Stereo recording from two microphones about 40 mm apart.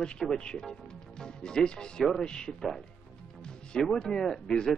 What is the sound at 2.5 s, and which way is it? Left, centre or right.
Speech, centre.